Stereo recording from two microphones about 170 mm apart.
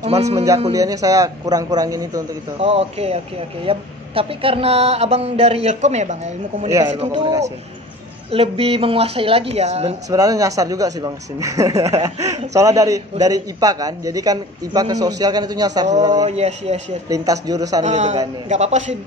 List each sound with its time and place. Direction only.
0.0 s speech: 40° right (ahead or behind)
0.7 s speech: 20° right (ahead or behind)
2.6 s speech: 35° right (ahead or behind)
7.2 s speech: 25° right (ahead or behind)
8.3 s speech: 35° right (ahead or behind)
10.0 s speech: 20° right (ahead or behind)
16.3 s speech: 40° right (ahead or behind)
17.1 s speech: 20° right (ahead or behind)
17.8 s a man's voice: 40° right (ahead or behind)